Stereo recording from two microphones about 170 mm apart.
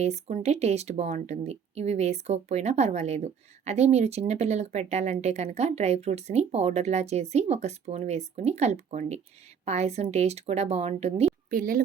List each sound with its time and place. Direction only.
0.0 s speech: 40° right (ahead or behind)
11.5 s a woman's voice: 55° right (ahead or behind)